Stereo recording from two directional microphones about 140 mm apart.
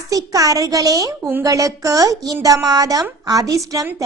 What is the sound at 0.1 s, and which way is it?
Speech, 25° right (ahead or behind).